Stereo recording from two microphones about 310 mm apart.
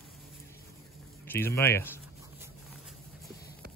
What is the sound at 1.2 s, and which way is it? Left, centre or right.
Speech, centre.